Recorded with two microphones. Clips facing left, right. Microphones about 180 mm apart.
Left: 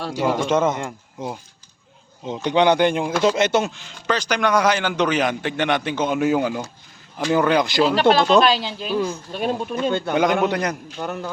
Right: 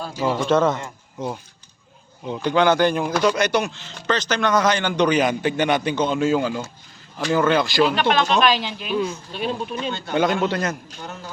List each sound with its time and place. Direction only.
0.0 s speech: 70° left (ahead or behind)
0.4 s a man's voice: 15° left (ahead or behind)
2.2 s speech: 20° left (ahead or behind)
4.0 s a man's voice: 10° left (ahead or behind)
7.9 s speech: 35° left (ahead or behind)
9.0 s speech: 45° left (ahead or behind)
10.4 s a man's voice: 15° left (ahead or behind)
11.0 s a man's voice: 55° left (ahead or behind)